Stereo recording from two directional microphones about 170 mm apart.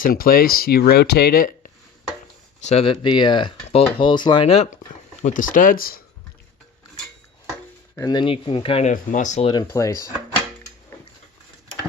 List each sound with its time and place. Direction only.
0.0 s speech: 60° left (ahead or behind)
2.6 s speech: 40° left (ahead or behind)
5.2 s speech: 50° left (ahead or behind)
7.9 s speech: 25° left (ahead or behind)
8.9 s speech: 45° left (ahead or behind)
9.5 s speech: 20° left (ahead or behind)